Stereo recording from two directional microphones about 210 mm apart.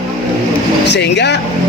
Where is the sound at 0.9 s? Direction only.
55° left (ahead or behind).